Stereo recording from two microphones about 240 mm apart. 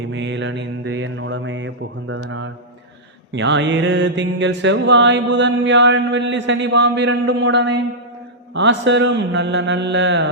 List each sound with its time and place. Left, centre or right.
0.1 s mantra: right